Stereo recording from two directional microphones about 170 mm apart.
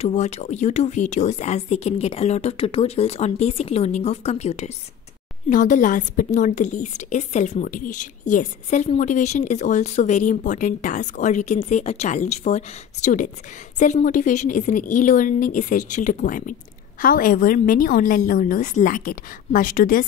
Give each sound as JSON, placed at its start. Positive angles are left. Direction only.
{"t": 0.0, "sound": "a woman's voice", "side_deg": 40}